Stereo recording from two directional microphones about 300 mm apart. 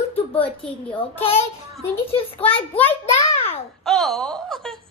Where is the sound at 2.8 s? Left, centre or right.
Centre.